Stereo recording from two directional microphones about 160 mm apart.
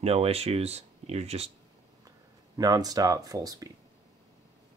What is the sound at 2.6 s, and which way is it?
Speech, 25° right (ahead or behind).